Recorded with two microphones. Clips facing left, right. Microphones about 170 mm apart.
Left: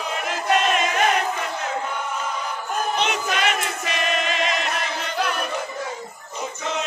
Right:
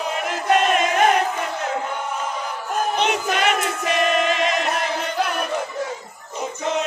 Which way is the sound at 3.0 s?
55° right (ahead or behind).